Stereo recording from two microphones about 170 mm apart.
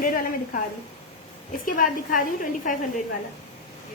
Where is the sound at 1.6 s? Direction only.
55° left (ahead or behind).